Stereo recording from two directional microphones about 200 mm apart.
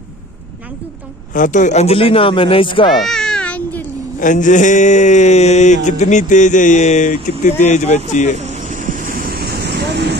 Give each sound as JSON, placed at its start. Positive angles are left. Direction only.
{"t": 1.3, "sound": "speech", "side_deg": 40}
{"t": 2.9, "sound": "cat", "side_deg": 0}
{"t": 4.2, "sound": "mantra", "side_deg": 40}
{"t": 8.4, "sound": "vehicle", "side_deg": -35}